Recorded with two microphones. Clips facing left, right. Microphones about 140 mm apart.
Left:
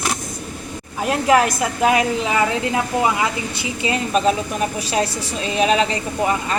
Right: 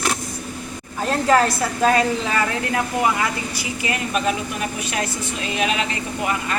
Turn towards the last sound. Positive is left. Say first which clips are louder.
# left 3 dB
turn(degrees=30)  # may be behind; listen again after turning